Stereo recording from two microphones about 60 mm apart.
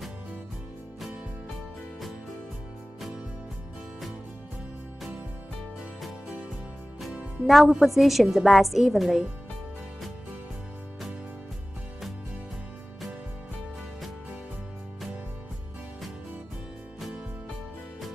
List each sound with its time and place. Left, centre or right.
7.0 s a woman's voice: centre